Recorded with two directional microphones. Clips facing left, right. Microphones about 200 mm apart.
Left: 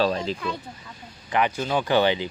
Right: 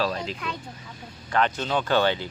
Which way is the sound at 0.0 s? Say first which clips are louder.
Left 4 dB; 30° left (ahead or behind).